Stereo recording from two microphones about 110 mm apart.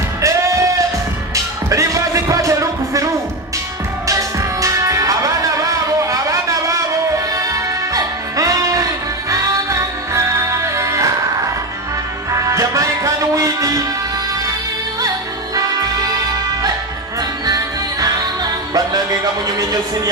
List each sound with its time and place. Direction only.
0.2 s music: 30° right (ahead or behind)
4.1 s music: 30° right (ahead or behind)
7.9 s music: 30° right (ahead or behind)
12.3 s music: 30° right (ahead or behind)
17.5 s music: 35° right (ahead or behind)